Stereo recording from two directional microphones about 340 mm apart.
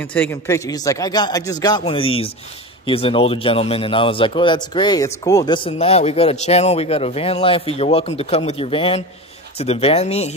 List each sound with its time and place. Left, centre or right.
0.0 s speech: centre